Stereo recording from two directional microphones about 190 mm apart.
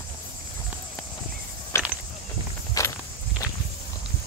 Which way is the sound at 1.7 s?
15° left (ahead or behind).